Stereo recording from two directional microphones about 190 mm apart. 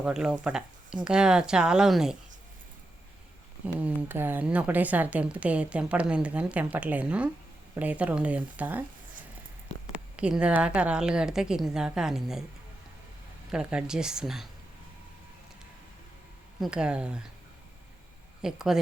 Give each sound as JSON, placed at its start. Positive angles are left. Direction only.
{"t": 0.0, "sound": "a woman's voice", "side_deg": -5}
{"t": 3.8, "sound": "a woman's voice", "side_deg": -10}
{"t": 10.2, "sound": "a woman's voice", "side_deg": -5}
{"t": 13.5, "sound": "a woman's voice", "side_deg": -5}
{"t": 16.6, "sound": "a woman's voice", "side_deg": -5}
{"t": 18.4, "sound": "a woman's voice", "side_deg": -5}